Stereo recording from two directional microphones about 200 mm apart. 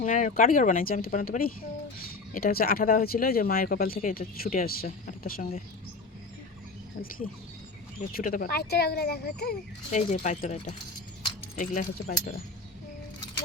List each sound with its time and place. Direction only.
0.0 s speech: 40° left (ahead or behind)
8.1 s speech: 45° left (ahead or behind)
9.9 s speech: 35° left (ahead or behind)